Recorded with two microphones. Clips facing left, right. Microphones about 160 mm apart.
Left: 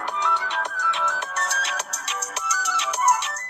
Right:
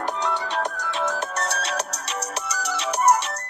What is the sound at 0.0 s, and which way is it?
Music, 40° right (ahead or behind).